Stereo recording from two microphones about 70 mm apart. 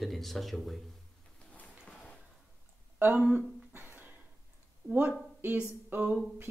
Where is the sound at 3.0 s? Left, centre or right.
Right.